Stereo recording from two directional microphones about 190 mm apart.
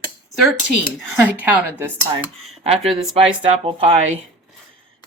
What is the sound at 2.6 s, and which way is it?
Speech, 30° right (ahead or behind).